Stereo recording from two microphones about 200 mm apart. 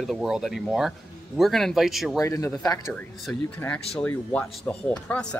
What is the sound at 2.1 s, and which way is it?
Speech, 15° left (ahead or behind).